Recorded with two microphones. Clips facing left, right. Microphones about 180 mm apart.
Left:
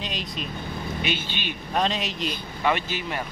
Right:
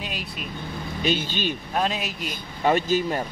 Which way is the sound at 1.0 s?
40° right (ahead or behind).